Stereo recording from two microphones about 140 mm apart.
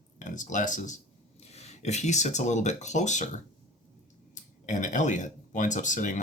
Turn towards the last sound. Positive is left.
turn(degrees=65)  # may be behind; listen again after turning